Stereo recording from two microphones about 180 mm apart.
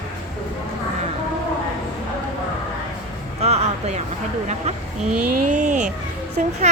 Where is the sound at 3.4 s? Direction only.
35° right (ahead or behind).